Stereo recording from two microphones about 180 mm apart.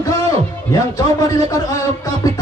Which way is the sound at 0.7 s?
20° left (ahead or behind).